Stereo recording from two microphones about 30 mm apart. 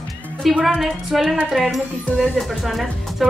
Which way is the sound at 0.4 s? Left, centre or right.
Centre.